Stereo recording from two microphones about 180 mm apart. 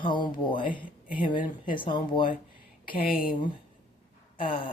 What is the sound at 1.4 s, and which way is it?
Speech, 50° left (ahead or behind).